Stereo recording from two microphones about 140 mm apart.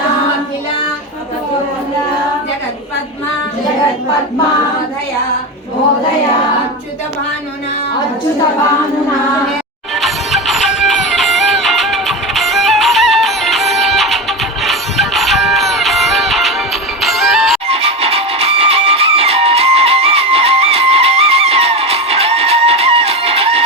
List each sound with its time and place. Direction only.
9.9 s music: centre (ahead or behind)
17.7 s music: 45° right (ahead or behind)